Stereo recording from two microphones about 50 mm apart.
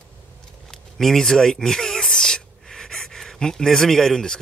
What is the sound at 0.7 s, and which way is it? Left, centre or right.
Speech, centre.